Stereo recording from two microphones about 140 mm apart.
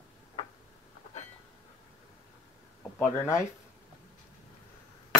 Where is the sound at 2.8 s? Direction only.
20° left (ahead or behind).